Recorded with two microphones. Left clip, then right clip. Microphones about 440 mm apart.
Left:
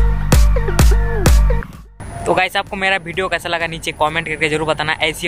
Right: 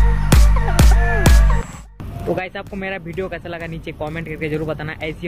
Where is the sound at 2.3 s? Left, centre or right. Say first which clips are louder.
Left 8 dB; left.